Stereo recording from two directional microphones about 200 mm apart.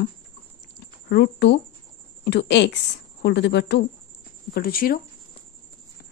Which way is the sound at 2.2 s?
60° left (ahead or behind).